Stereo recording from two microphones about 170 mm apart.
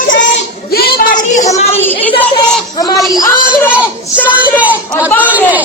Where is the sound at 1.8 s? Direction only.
10° left (ahead or behind).